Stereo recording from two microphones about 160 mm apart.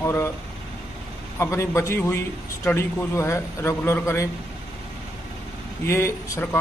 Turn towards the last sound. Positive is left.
turn(degrees=15)  # may be behind; listen again after turning